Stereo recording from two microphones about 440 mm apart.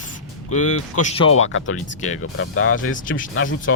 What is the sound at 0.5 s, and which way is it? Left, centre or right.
Speech, left.